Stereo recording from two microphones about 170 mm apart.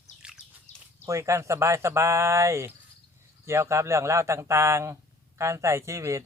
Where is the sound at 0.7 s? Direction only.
45° left (ahead or behind).